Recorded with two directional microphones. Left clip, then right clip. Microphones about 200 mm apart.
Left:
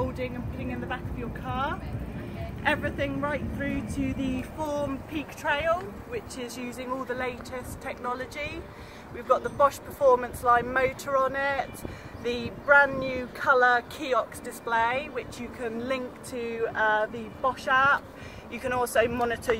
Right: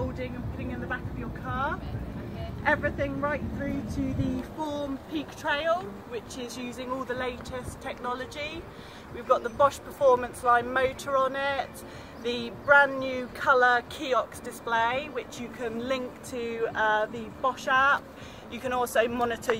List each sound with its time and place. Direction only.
0.2 s vehicle: 55° left (ahead or behind)
2.6 s speech: 50° left (ahead or behind)
4.3 s child singing: 40° left (ahead or behind)
5.4 s speech: 30° left (ahead or behind)
6.3 s speech: 10° left (ahead or behind)